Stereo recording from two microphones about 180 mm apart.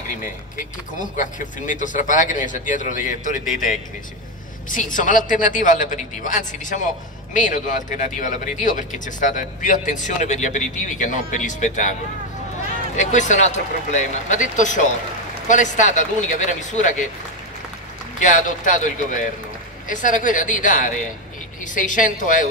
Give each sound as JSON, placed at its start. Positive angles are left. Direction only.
{"t": 0.9, "sound": "speech", "side_deg": 45}
{"t": 12.9, "sound": "speech", "side_deg": 40}
{"t": 18.2, "sound": "speech", "side_deg": 45}